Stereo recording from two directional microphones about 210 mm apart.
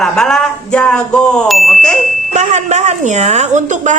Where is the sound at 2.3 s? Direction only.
35° right (ahead or behind).